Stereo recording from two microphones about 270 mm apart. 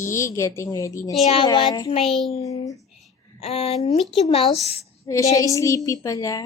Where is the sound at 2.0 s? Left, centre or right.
Centre.